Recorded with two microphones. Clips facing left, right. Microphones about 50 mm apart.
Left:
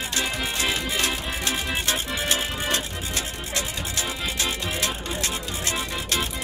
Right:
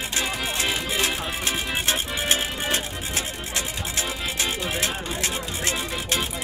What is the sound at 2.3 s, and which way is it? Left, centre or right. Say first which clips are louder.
Music: right 1 dB; right.